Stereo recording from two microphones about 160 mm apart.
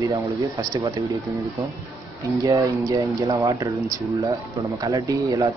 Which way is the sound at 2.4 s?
20° right (ahead or behind).